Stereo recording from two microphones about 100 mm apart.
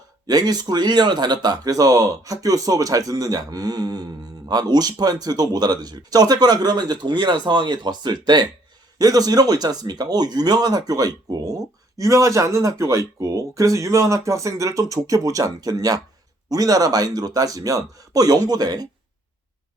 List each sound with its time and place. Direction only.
0.3 s speech: 40° right (ahead or behind)